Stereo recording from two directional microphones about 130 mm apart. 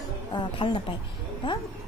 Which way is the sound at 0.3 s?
40° left (ahead or behind).